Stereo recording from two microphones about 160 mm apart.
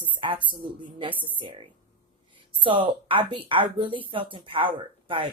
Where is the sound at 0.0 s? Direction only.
35° right (ahead or behind).